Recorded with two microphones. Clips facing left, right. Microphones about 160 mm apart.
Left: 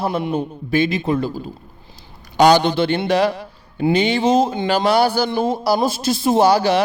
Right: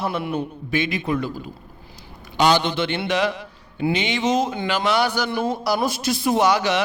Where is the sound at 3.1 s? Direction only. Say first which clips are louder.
Left 5 dB; 35° left (ahead or behind).